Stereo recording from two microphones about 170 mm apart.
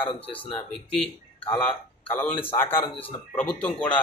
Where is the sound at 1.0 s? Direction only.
10° left (ahead or behind).